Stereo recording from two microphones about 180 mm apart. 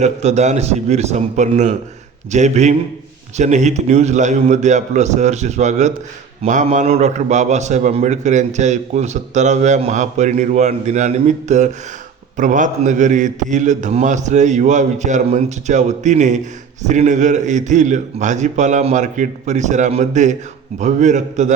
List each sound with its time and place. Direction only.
0.0 s a man's voice: 40° right (ahead or behind)